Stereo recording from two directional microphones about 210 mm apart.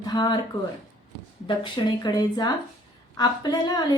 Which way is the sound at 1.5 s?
20° left (ahead or behind).